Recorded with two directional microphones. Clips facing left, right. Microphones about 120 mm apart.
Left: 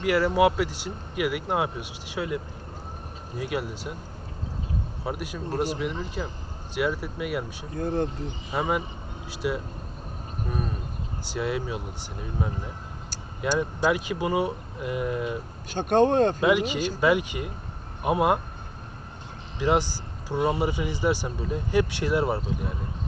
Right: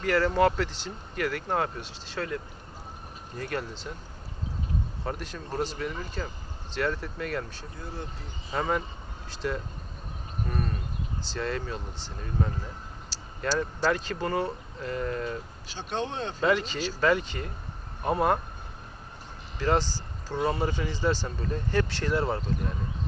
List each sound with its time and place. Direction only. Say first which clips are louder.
0.0 s speech: left 2 dB; 10° left (ahead or behind)
5.0 s speech: left 3 dB; 10° left (ahead or behind)
7.8 s speech: left 13 dB; 55° left (ahead or behind)
8.4 s speech: left 1 dB; 10° left (ahead or behind)
15.7 s speech: left 12 dB; 50° left (ahead or behind)
16.4 s speech: left 3 dB; 10° left (ahead or behind)
19.5 s speech: left 2 dB; 10° left (ahead or behind)